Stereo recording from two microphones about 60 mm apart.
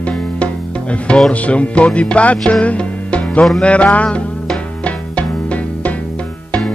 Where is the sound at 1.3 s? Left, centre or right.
Left.